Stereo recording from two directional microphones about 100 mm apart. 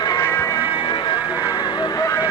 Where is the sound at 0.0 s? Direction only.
40° left (ahead or behind).